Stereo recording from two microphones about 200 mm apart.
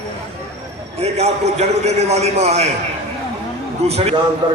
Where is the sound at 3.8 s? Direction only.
30° right (ahead or behind).